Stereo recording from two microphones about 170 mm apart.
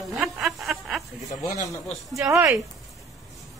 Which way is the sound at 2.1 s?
20° right (ahead or behind).